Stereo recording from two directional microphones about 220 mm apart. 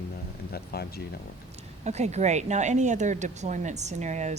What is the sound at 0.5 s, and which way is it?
Speech, 45° left (ahead or behind).